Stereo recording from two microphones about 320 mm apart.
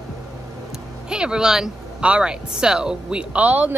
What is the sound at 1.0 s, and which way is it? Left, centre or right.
Speech, centre.